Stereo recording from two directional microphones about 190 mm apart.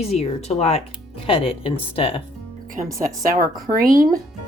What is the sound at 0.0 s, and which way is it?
Speech, 35° left (ahead or behind).